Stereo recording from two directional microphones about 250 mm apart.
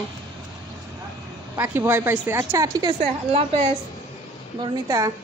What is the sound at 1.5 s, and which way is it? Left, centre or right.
Speech, centre.